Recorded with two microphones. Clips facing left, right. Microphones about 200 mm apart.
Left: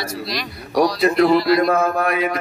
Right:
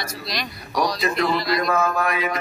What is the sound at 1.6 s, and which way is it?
Mantra, 55° left (ahead or behind).